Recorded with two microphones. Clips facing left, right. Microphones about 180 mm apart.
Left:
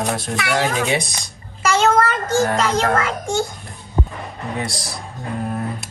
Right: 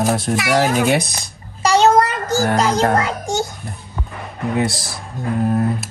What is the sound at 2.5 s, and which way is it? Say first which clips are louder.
Speech: right 3 dB; 40° right (ahead or behind).